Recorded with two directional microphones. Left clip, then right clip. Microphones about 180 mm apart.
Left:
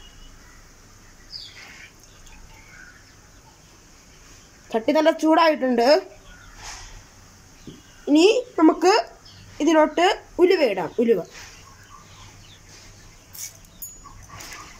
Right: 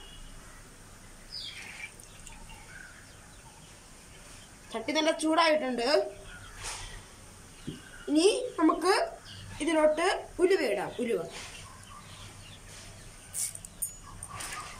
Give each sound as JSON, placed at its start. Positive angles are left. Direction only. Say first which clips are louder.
{"t": 4.6, "sound": "speech", "louder": "left 10 dB", "side_deg": 50}
{"t": 8.1, "sound": "speech", "louder": "left 9 dB", "side_deg": 55}